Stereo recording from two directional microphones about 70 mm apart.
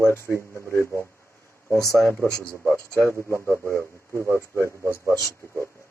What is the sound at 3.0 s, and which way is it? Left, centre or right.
Speech, left.